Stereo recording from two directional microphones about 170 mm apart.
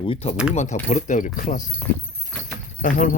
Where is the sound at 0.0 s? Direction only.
35° left (ahead or behind); by 1.7 s 50° left (ahead or behind).